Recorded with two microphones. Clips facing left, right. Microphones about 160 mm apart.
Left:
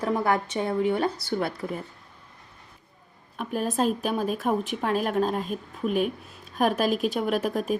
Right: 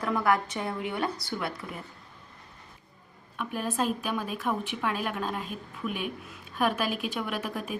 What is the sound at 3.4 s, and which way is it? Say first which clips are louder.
Speech: left 4 dB; 40° left (ahead or behind).